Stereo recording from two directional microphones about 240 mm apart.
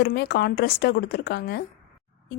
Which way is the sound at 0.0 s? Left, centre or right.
Left.